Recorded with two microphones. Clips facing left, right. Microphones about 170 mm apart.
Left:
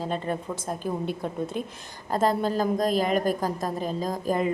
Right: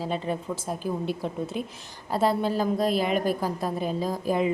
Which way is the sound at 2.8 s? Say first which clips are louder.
Even; 45° left (ahead or behind).